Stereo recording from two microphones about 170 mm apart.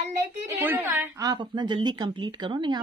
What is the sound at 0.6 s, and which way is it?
A woman's voice, 10° right (ahead or behind).